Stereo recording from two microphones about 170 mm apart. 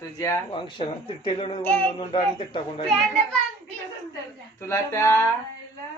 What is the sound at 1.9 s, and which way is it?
Speech, 25° left (ahead or behind).